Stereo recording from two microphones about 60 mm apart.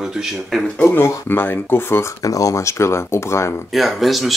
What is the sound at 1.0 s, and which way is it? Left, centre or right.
Speech, left.